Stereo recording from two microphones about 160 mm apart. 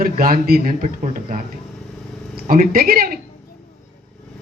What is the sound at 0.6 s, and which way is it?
A man's voice, 55° right (ahead or behind).